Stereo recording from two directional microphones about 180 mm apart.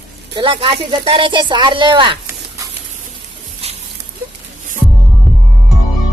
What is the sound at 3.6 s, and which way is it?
Patter, 35° right (ahead or behind).